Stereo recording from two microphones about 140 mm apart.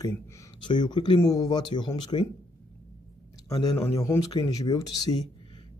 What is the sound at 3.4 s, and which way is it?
A man's voice, 30° left (ahead or behind).